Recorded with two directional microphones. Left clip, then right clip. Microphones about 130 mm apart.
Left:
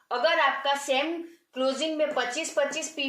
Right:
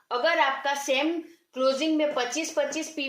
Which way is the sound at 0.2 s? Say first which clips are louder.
Even; 45° right (ahead or behind).